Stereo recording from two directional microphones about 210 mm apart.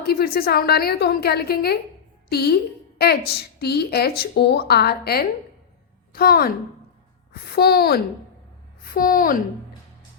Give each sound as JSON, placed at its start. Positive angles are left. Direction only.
{"t": 0.0, "sound": "a woman's voice", "side_deg": 45}
{"t": 7.5, "sound": "a woman's voice", "side_deg": 45}